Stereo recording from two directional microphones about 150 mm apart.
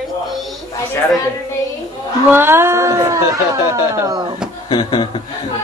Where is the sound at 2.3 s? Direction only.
15° right (ahead or behind).